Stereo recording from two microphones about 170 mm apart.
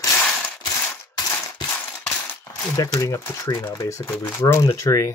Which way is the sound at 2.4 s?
20° left (ahead or behind).